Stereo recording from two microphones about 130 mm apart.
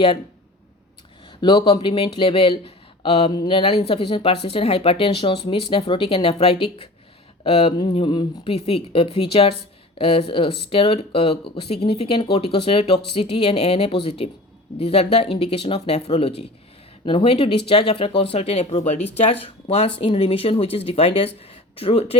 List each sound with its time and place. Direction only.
1.4 s speech: 40° left (ahead or behind)